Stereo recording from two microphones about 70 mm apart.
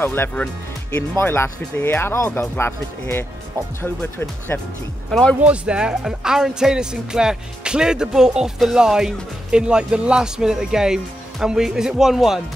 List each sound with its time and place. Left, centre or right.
0.0 s speech: left
5.4 s speech: centre